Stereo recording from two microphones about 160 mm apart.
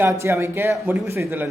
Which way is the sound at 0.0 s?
15° right (ahead or behind).